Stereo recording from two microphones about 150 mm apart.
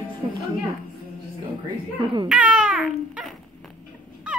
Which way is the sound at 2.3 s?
5° right (ahead or behind).